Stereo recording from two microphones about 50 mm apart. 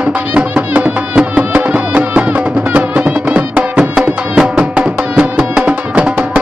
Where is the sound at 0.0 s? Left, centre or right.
Right.